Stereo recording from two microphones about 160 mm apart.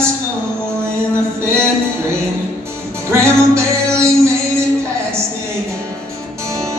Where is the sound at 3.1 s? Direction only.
15° right (ahead or behind).